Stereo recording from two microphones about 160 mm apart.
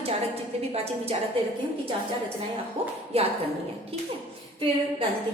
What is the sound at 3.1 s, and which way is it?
Speech, 40° right (ahead or behind).